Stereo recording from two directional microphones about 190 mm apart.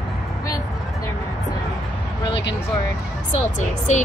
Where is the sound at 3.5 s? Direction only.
40° left (ahead or behind).